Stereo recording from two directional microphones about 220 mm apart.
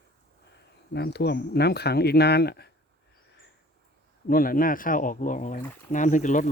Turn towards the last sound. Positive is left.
turn(degrees=35)  # may be behind; listen again after turning